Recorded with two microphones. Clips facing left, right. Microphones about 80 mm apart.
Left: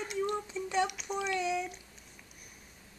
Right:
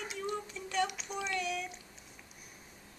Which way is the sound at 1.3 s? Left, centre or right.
Left.